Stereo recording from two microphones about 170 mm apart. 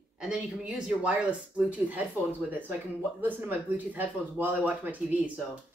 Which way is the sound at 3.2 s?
10° right (ahead or behind).